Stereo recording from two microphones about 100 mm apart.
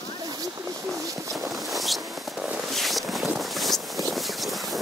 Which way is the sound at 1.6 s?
Centre (ahead or behind).